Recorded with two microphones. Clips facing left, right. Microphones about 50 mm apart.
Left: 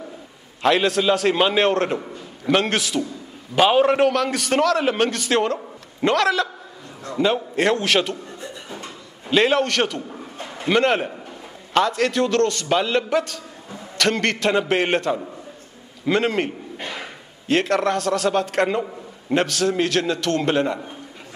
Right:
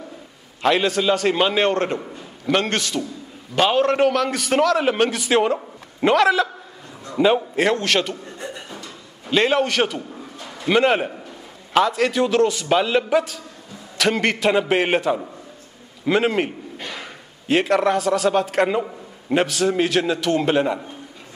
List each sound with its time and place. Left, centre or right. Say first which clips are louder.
0.6 s a man's voice: even; centre
9.3 s a man's voice: even; centre
16.7 s a sound: left 1 dB; centre
17.5 s a man's voice: right 2 dB; centre